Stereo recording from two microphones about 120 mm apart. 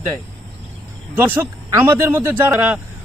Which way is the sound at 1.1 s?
15° right (ahead or behind).